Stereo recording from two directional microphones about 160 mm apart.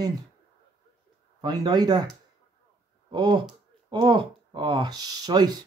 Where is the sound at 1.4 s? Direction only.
25° right (ahead or behind).